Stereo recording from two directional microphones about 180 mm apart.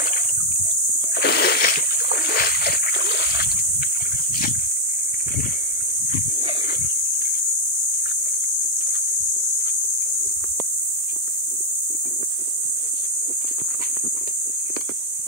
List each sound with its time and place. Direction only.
1.2 s splash: 65° left (ahead or behind)